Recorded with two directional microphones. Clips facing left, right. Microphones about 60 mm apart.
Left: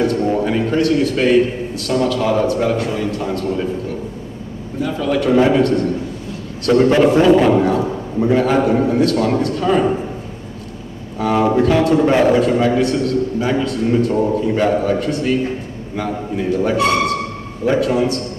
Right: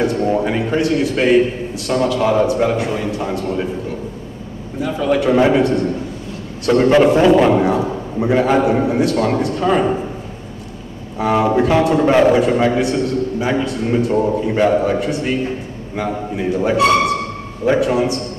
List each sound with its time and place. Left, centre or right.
0.0 s a man's voice: centre
4.7 s a man's voice: centre
5.0 s a man's voice: centre
11.1 s a man's voice: centre